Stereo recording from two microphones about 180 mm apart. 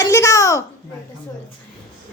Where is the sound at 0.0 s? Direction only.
15° left (ahead or behind).